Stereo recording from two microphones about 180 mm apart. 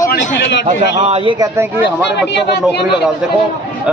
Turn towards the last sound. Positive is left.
turn(degrees=65)  # may be behind; listen again after turning